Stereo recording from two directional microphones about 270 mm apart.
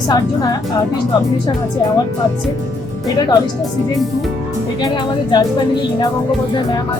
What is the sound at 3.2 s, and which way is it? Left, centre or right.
Speech, centre.